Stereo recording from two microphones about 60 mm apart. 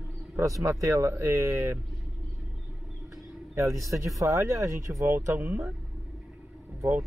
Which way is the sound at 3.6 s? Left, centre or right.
Right.